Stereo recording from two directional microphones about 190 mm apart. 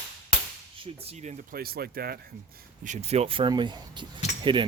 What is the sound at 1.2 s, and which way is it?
Speech, 50° right (ahead or behind).